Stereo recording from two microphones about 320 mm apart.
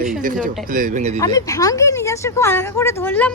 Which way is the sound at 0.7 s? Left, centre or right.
Right.